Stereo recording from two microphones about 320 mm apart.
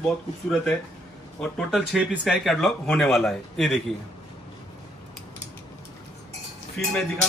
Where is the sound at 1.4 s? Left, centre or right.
Centre.